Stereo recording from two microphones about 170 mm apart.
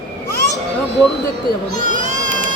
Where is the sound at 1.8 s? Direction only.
50° right (ahead or behind).